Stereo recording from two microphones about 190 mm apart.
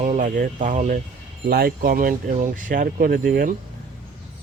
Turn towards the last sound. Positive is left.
turn(degrees=-50)  # may be behind; listen again after turning